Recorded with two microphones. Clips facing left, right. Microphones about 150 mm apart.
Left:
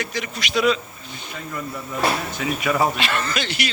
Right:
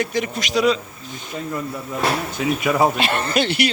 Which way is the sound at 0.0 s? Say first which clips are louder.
Right 6 dB; 50° right (ahead or behind).